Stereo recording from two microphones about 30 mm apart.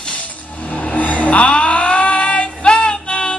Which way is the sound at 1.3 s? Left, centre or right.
Left.